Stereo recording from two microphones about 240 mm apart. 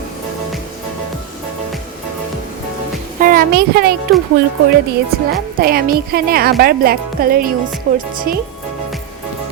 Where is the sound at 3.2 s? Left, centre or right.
Right.